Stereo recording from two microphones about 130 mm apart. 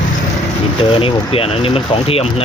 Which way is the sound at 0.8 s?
45° left (ahead or behind).